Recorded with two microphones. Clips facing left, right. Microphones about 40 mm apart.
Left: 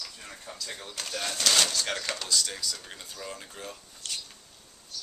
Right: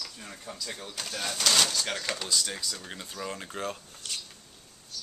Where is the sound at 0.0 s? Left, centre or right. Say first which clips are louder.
Right 1 dB; centre.